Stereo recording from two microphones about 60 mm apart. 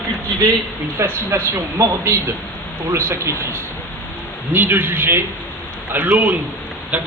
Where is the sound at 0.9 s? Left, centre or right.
Right.